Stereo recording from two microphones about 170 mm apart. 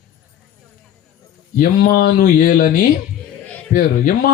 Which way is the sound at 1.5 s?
55° left (ahead or behind).